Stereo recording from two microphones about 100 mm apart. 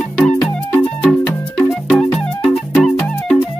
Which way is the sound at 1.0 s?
15° left (ahead or behind).